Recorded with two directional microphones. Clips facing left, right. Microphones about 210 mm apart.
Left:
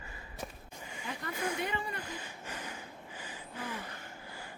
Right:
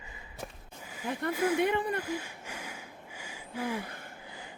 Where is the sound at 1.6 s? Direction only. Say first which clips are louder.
Right 9 dB; 60° right (ahead or behind).